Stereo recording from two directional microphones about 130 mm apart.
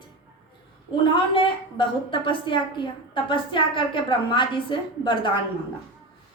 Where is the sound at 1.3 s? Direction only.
40° left (ahead or behind).